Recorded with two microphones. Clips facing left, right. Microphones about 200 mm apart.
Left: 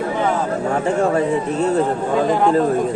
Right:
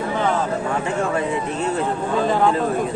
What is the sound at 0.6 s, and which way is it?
Speech, 40° left (ahead or behind).